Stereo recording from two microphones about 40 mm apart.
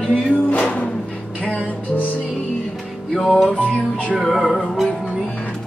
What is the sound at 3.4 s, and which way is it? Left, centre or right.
Music, left.